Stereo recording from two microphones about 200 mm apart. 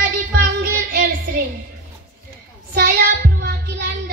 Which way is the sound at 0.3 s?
50° right (ahead or behind).